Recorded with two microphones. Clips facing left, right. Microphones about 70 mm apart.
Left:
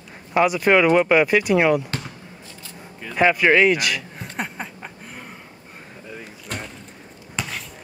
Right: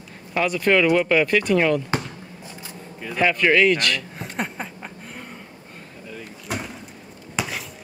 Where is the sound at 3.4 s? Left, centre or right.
Centre.